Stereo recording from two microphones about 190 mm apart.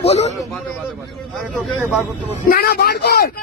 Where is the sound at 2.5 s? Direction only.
55° left (ahead or behind).